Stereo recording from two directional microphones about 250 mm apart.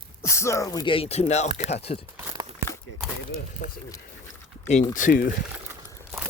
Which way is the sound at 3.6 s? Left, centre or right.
Left.